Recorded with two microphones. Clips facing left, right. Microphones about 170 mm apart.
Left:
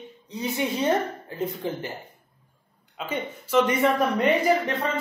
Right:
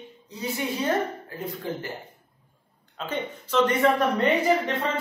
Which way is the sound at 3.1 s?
10° left (ahead or behind).